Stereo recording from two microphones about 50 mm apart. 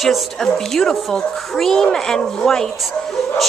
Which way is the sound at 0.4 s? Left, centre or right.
Centre.